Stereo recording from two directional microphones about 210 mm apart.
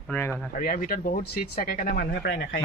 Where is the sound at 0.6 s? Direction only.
45° left (ahead or behind).